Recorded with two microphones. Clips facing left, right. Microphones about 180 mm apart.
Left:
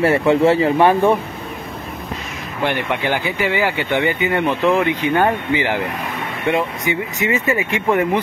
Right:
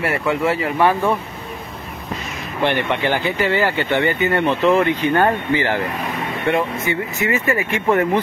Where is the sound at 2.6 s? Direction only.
15° left (ahead or behind).